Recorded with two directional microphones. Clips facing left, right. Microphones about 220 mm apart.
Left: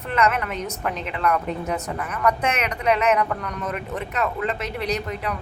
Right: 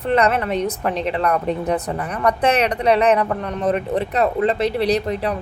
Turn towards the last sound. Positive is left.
turn(degrees=-35)  # may be behind; listen again after turning